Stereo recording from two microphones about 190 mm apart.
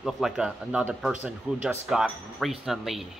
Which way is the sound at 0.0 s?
Centre (ahead or behind).